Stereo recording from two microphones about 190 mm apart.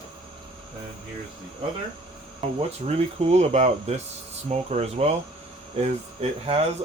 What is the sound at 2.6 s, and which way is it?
Speech, 35° right (ahead or behind).